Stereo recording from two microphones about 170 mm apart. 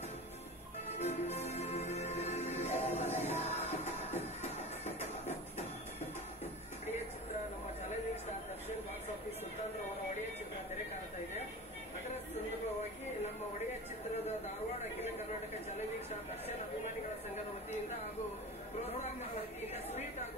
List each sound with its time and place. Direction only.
0.9 s music: 40° left (ahead or behind)